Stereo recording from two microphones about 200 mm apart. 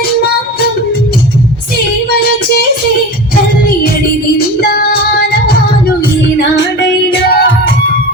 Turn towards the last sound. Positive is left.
turn(degrees=60)  # may be behind; listen again after turning